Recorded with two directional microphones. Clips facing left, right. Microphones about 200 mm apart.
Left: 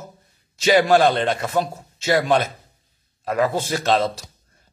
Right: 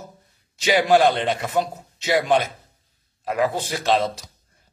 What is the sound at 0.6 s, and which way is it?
Speech, 15° right (ahead or behind).